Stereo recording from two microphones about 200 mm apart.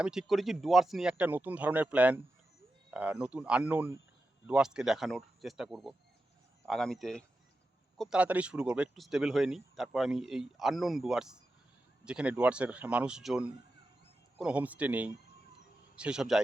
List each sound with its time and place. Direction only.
0.0 s speech: 5° right (ahead or behind)